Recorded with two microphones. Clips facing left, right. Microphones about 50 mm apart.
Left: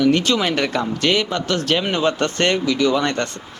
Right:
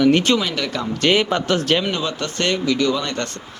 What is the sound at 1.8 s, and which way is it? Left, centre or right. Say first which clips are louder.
Speech: left 4 dB; left.